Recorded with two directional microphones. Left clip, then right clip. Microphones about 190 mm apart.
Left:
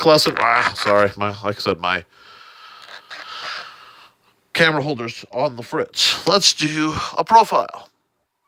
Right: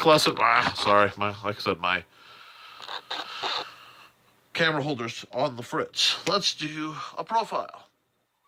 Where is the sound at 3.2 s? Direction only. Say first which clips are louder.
Left 4 dB; 40° left (ahead or behind).